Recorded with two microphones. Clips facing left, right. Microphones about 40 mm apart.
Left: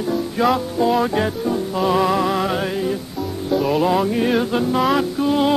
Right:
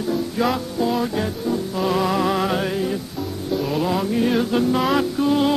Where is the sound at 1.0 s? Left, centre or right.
Left.